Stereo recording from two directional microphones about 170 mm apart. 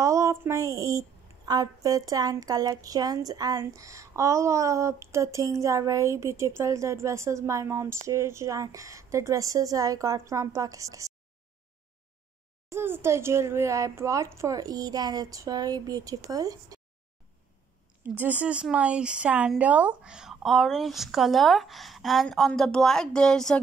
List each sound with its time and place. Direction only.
0.0 s a child's voice: 15° right (ahead or behind)
12.6 s a child's voice: 15° right (ahead or behind)
18.0 s speech: 10° right (ahead or behind)